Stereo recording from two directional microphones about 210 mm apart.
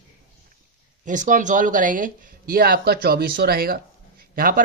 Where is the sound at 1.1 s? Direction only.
40° right (ahead or behind).